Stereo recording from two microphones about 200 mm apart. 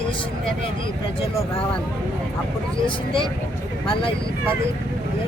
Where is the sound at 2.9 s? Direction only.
25° left (ahead or behind).